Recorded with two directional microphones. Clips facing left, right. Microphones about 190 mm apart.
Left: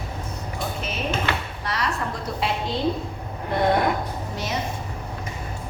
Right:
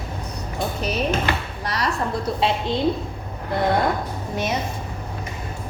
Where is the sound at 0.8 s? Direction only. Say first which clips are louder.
Right 5 dB; 40° right (ahead or behind).